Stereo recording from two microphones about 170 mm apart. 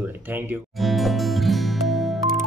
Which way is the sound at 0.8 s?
Centre (ahead or behind).